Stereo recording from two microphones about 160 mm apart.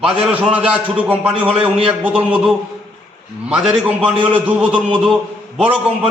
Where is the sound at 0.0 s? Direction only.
5° right (ahead or behind).